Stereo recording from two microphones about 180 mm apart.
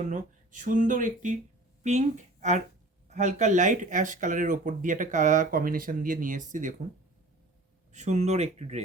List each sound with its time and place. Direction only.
0.1 s speech: 45° right (ahead or behind)
7.9 s speech: 40° right (ahead or behind)